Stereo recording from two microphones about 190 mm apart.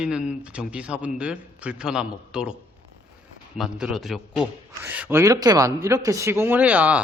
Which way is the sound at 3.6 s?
Centre (ahead or behind).